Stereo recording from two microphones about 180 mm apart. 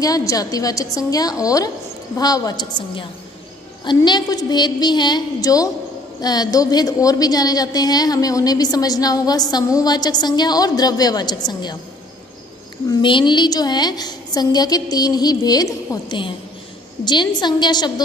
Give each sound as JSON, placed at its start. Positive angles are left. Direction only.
{"t": 0.0, "sound": "a woman's voice", "side_deg": 20}
{"t": 13.0, "sound": "a woman's voice", "side_deg": 25}